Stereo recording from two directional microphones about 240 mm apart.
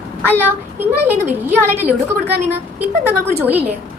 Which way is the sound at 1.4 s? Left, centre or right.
Centre.